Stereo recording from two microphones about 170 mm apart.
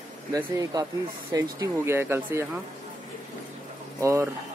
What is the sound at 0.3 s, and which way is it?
Speech, 20° right (ahead or behind).